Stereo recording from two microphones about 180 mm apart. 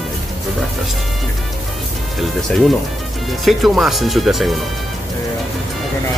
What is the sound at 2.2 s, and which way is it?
Speech, centre (ahead or behind).